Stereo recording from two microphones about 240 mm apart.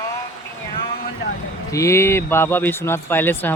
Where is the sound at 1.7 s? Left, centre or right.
Centre.